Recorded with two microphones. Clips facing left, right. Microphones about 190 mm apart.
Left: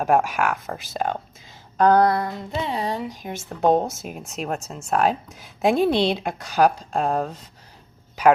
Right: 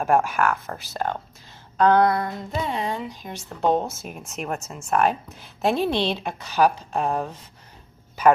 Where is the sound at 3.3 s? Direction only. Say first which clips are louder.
Left 3 dB; 45° left (ahead or behind).